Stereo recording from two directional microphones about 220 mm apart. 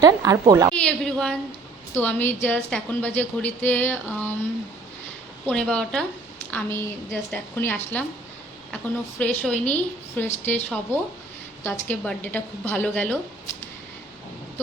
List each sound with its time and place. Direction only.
0.0 s speech: 15° right (ahead or behind)
0.8 s a woman's voice: 5° left (ahead or behind)
5.5 s a woman's voice: 5° left (ahead or behind)